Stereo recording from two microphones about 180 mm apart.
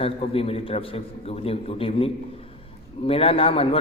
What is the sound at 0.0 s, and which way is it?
A man's voice, 30° left (ahead or behind).